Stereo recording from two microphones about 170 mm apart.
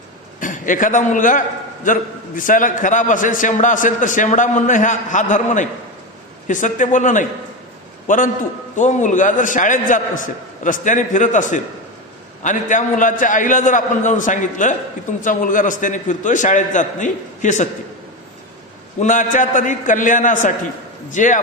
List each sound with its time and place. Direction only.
0.3 s a man's voice: 50° left (ahead or behind)
18.9 s a man's voice: 50° left (ahead or behind)